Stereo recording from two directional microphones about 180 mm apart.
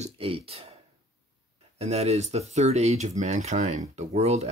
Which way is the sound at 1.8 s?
35° right (ahead or behind).